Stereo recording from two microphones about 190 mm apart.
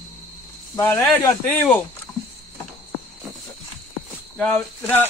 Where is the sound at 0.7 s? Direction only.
10° left (ahead or behind).